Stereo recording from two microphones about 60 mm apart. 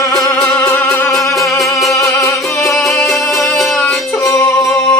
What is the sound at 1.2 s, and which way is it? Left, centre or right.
Music, centre.